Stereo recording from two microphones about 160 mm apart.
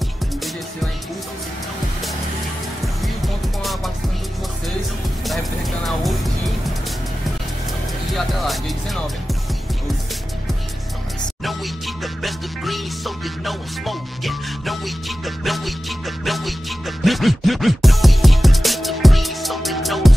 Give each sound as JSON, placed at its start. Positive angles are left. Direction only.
{"t": 8.1, "sound": "speech", "side_deg": 0}
{"t": 11.4, "sound": "music", "side_deg": 0}